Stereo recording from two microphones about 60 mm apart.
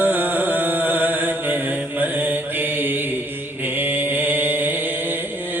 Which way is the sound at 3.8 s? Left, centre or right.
Right.